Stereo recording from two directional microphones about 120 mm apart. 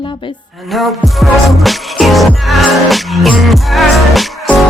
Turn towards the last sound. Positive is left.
turn(degrees=0)  # may be behind; listen again after turning